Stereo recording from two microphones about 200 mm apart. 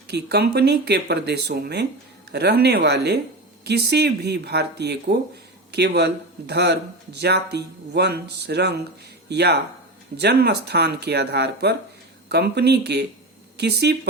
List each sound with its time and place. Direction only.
0.1 s speech: 55° right (ahead or behind)